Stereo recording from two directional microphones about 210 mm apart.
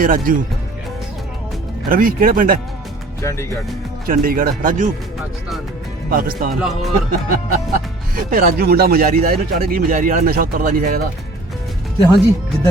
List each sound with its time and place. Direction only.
0.0 s speech: 40° right (ahead or behind)
1.9 s speech: 40° right (ahead or behind)
3.2 s speech: 15° left (ahead or behind)
4.0 s speech: 45° right (ahead or behind)
6.1 s speech: 45° right (ahead or behind)
6.5 s speech: centre (ahead or behind)
7.3 s speech: 45° right (ahead or behind)